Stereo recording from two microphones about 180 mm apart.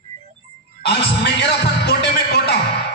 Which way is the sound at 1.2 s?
65° left (ahead or behind).